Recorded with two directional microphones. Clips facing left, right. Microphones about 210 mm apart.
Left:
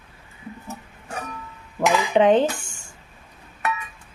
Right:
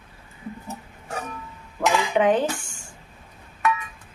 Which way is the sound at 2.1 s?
25° left (ahead or behind).